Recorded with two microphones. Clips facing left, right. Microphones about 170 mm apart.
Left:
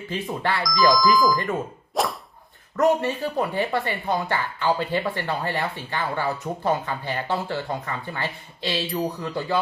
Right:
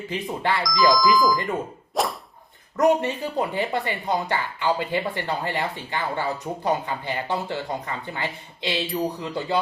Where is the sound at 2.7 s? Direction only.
15° right (ahead or behind).